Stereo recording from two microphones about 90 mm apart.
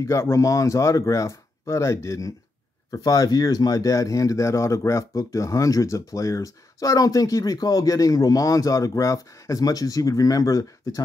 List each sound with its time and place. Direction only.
0.0 s speech: 35° left (ahead or behind)